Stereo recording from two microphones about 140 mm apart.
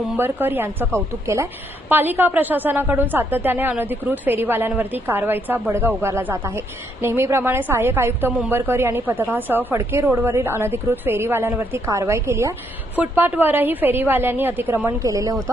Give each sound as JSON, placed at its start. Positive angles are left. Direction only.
{"t": 0.2, "sound": "a woman's voice", "side_deg": -15}